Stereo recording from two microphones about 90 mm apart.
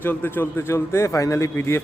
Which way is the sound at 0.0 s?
20° left (ahead or behind).